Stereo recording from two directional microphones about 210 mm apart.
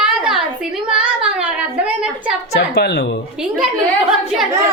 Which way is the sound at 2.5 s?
50° left (ahead or behind).